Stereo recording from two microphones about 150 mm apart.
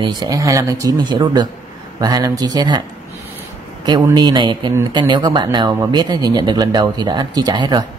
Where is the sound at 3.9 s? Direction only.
30° right (ahead or behind).